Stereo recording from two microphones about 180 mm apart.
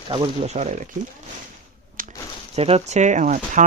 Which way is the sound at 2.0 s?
50° right (ahead or behind).